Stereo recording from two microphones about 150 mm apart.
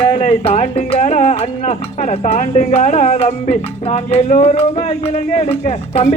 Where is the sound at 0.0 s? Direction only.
40° left (ahead or behind).